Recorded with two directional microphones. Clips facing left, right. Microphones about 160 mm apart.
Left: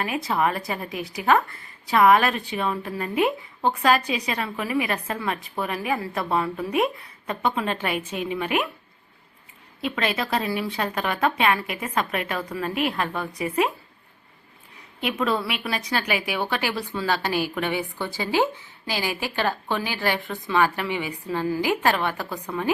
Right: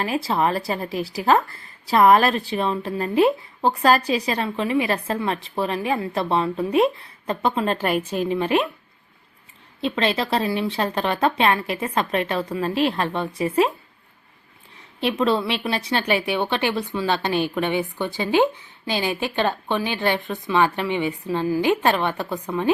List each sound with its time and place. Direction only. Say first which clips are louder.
0.0 s a woman's voice: right 2 dB; 30° right (ahead or behind)
9.8 s a woman's voice: right 4 dB; 25° right (ahead or behind)
15.2 s a woman's voice: right 4 dB; 30° right (ahead or behind)